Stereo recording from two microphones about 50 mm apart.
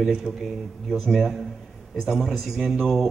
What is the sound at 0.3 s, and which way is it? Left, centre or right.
Speech, right.